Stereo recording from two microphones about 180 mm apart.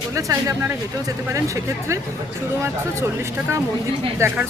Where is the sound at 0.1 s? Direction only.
20° right (ahead or behind).